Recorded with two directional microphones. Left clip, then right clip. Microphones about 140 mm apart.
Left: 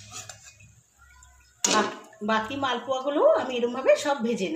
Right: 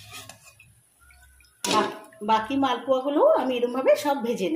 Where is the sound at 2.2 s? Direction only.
30° right (ahead or behind).